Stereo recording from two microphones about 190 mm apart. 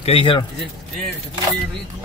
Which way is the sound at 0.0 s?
30° left (ahead or behind).